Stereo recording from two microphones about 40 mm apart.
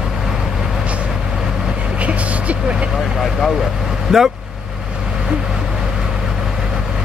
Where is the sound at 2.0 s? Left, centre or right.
Right.